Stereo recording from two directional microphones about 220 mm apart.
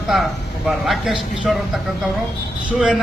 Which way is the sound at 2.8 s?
5° right (ahead or behind).